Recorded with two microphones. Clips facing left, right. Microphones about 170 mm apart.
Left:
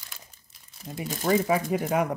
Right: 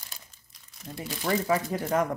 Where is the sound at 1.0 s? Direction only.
45° left (ahead or behind).